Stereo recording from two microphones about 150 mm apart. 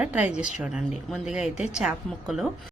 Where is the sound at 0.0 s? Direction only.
10° right (ahead or behind).